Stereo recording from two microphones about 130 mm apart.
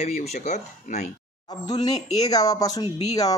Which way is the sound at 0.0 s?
55° left (ahead or behind).